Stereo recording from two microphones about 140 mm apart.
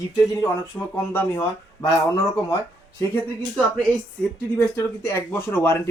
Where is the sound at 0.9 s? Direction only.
15° left (ahead or behind).